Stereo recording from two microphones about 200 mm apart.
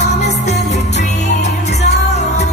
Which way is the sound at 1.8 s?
35° left (ahead or behind).